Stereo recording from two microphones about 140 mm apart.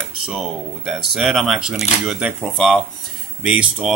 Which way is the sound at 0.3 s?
Centre (ahead or behind).